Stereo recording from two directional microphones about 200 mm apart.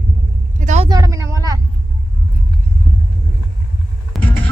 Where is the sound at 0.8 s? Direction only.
15° right (ahead or behind).